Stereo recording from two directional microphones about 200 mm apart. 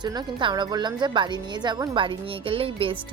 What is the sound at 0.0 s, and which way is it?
Speech, 20° right (ahead or behind).